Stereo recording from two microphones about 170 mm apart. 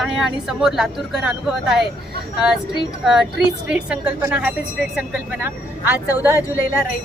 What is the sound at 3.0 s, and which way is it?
A woman's voice, 5° right (ahead or behind).